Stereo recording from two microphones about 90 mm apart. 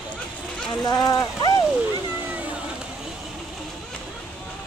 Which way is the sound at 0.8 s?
45° left (ahead or behind).